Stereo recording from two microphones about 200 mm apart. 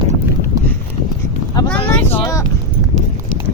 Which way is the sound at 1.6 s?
20° left (ahead or behind).